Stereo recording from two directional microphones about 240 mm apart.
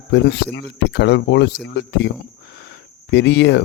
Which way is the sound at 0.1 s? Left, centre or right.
Left.